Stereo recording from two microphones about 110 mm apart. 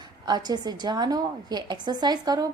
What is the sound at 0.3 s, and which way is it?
A woman's voice, 40° right (ahead or behind).